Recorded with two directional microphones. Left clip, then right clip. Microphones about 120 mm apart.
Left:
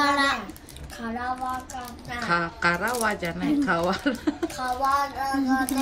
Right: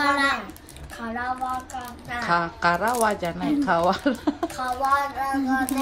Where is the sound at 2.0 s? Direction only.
15° right (ahead or behind).